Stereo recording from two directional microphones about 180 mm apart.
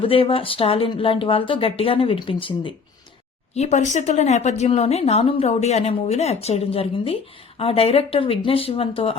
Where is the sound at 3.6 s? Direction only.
40° left (ahead or behind).